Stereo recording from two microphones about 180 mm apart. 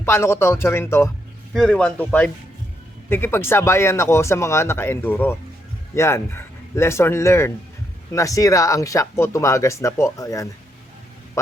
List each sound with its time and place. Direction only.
0.0 s speech: 15° left (ahead or behind)